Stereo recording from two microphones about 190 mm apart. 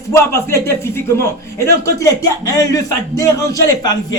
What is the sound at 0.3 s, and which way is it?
A man's voice, 15° left (ahead or behind).